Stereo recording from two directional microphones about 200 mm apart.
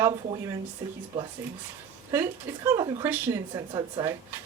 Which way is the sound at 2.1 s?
15° right (ahead or behind).